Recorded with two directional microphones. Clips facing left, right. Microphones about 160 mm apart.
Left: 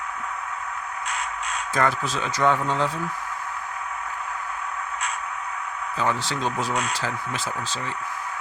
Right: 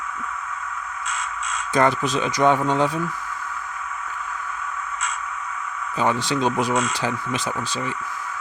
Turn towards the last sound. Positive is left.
turn(degrees=-15)  # may be behind; listen again after turning